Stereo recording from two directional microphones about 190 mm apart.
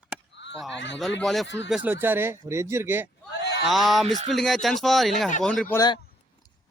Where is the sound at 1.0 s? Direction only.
Centre (ahead or behind).